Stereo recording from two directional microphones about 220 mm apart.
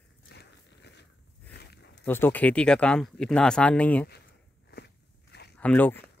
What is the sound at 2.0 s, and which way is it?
Speech, 10° left (ahead or behind).